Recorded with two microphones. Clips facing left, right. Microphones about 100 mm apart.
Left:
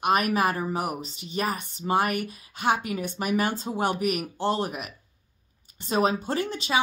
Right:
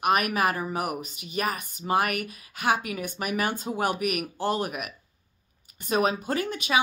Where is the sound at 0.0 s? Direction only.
30° left (ahead or behind).